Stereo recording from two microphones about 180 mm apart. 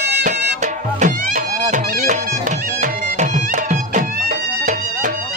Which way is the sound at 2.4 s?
45° right (ahead or behind).